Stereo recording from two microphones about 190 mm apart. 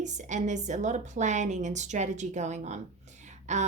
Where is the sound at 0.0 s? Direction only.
40° right (ahead or behind).